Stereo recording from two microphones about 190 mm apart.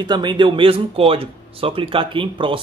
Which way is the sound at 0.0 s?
25° right (ahead or behind).